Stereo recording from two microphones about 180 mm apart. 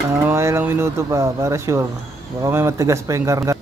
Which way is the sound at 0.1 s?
15° right (ahead or behind).